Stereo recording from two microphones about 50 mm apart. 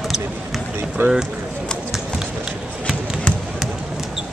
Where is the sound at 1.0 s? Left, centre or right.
Right.